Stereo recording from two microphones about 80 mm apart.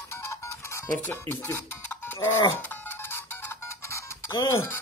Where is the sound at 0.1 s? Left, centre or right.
Left.